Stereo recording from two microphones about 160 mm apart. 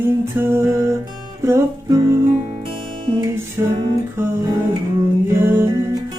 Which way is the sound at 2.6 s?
30° right (ahead or behind).